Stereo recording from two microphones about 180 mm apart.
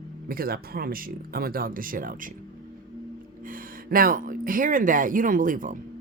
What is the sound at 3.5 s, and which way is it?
Speech, 50° right (ahead or behind).